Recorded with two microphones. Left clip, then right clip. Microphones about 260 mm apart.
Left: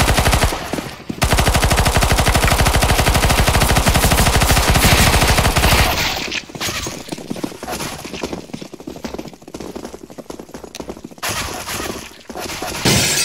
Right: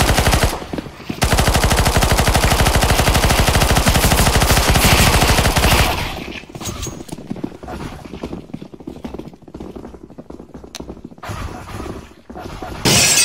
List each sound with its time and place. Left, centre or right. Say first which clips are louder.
0.0 s machine gun: even; centre
6.0 s a sound: left 7 dB; left
7.6 s clip-clop: left 5 dB; left
11.2 s a sound: left 8 dB; left
12.4 s dog: left 5 dB; left
12.8 s shatter: right 3 dB; centre